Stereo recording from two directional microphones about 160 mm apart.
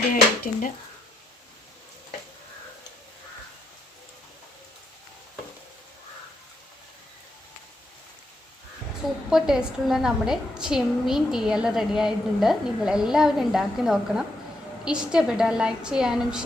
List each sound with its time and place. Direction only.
0.1 s speech: 55° left (ahead or behind)
9.3 s a woman's voice: 5° right (ahead or behind)